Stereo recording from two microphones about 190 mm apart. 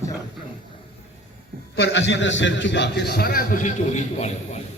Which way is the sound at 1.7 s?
65° left (ahead or behind).